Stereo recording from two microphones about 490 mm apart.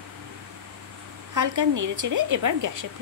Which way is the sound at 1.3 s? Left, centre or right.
Right.